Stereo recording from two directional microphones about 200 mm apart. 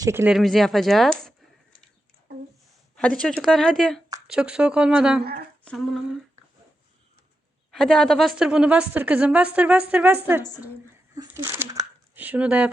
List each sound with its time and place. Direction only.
0.0 s a woman's voice: 15° right (ahead or behind)
0.3 s speech: centre (ahead or behind)
2.9 s speech: 5° left (ahead or behind)
5.2 s speech: 50° right (ahead or behind)
5.6 s speech: centre (ahead or behind)
7.7 s a woman's voice: 5° left (ahead or behind)